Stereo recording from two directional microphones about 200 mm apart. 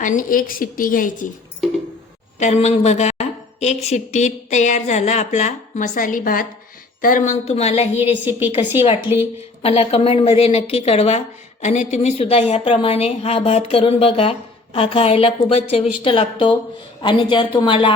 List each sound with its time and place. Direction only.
0.0 s a woman's voice: 40° left (ahead or behind)
2.4 s a woman's voice: 35° left (ahead or behind)
8.2 s a woman's voice: 10° right (ahead or behind)
9.6 s a woman's voice: 30° left (ahead or behind)